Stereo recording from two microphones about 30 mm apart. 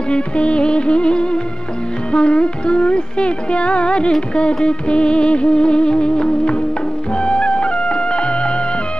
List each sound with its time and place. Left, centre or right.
0.1 s music: left